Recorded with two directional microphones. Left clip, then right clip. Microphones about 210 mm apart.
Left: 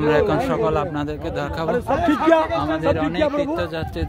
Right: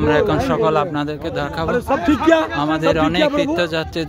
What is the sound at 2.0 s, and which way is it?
Speech, 45° right (ahead or behind).